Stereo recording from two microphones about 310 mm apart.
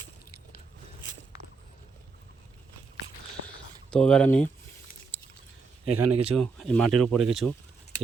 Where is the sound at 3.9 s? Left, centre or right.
Centre.